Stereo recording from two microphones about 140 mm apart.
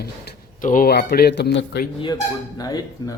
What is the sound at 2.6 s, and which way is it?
Dishes, 25° left (ahead or behind).